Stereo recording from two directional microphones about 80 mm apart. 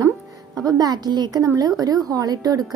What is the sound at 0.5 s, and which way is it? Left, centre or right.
A woman's voice, right.